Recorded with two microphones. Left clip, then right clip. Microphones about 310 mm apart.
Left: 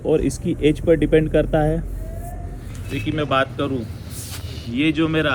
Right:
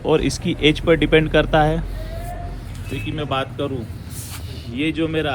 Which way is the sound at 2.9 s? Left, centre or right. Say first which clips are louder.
Left 4 dB; centre.